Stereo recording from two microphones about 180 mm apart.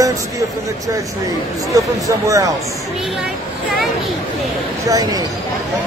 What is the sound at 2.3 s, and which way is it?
Speech, 20° right (ahead or behind).